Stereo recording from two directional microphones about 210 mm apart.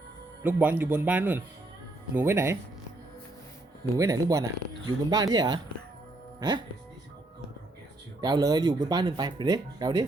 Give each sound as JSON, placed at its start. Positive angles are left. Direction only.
{"t": 0.4, "sound": "a man's voice", "side_deg": -10}
{"t": 3.9, "sound": "a man's voice", "side_deg": -15}
{"t": 8.2, "sound": "speech", "side_deg": -20}